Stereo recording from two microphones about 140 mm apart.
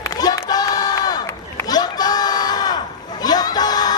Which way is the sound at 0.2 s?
30° left (ahead or behind).